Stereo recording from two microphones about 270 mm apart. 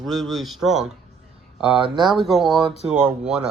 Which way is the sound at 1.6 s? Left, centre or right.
Centre.